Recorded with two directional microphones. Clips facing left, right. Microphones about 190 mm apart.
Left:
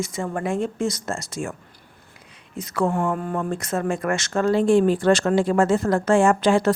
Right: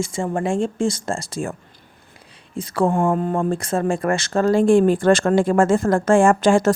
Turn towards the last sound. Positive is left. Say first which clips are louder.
# right 3 dB
turn(degrees=-45)  # may be behind; listen again after turning